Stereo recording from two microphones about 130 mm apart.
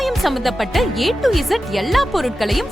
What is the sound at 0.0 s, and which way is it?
Speech, centre (ahead or behind).